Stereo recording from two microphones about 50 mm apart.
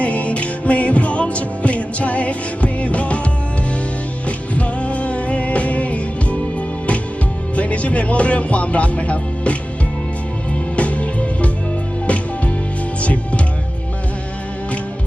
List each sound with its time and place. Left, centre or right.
0.0 s music: left
4.3 s music: left
7.5 s music: left
10.8 s music: left